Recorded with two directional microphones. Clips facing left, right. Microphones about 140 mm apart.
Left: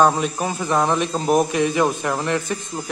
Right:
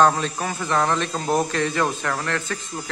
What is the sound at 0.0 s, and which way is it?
Speech, 15° left (ahead or behind).